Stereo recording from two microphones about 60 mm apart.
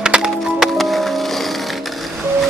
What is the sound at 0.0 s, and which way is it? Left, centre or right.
Music, centre.